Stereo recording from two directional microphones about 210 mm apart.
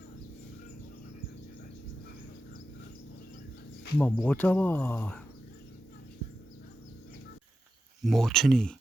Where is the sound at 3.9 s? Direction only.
10° left (ahead or behind).